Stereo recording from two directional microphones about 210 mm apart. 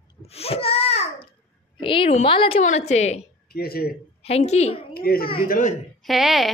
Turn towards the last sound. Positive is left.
turn(degrees=0)  # may be behind; listen again after turning